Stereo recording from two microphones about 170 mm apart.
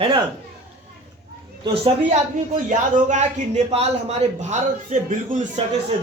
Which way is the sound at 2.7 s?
45° right (ahead or behind).